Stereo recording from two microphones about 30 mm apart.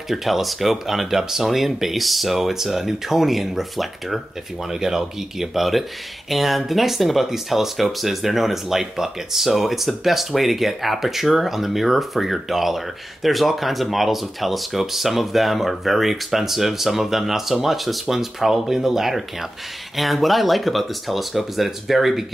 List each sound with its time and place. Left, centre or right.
0.1 s speech: centre
4.7 s speech: centre